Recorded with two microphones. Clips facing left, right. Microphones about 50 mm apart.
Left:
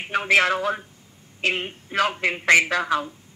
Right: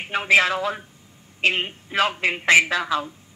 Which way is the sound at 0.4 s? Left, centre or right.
Left.